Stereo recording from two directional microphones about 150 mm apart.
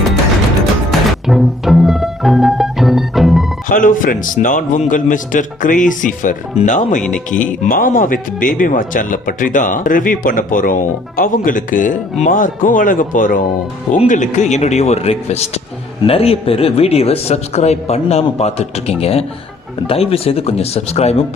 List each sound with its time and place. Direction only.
0.9 s music: centre (ahead or behind)
3.7 s speech: 65° left (ahead or behind)
7.3 s speech: 10° left (ahead or behind)
7.7 s a man's voice: 65° left (ahead or behind); by 21.2 s 45° left (ahead or behind)